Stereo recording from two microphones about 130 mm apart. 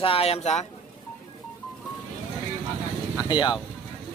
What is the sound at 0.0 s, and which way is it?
Speech, 50° left (ahead or behind).